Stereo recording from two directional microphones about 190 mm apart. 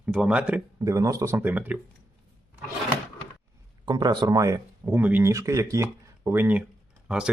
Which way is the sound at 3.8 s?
20° right (ahead or behind).